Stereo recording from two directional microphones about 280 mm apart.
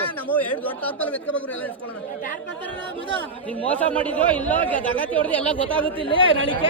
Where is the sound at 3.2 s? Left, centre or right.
Centre.